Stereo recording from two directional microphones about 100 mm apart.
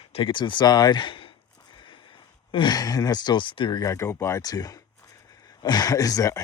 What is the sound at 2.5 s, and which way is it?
Speech, 55° left (ahead or behind).